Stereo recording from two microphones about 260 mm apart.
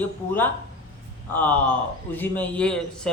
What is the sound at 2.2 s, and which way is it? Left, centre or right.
Speech, centre.